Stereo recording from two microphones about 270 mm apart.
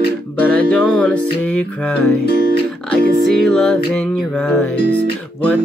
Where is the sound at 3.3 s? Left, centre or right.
Centre.